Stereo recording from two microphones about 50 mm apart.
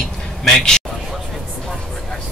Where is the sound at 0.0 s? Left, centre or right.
Centre.